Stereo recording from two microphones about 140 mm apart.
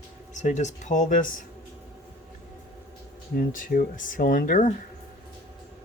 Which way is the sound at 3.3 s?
85° left.